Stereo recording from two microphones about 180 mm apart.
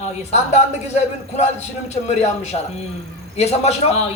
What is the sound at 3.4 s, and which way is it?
Speech, 35° left (ahead or behind).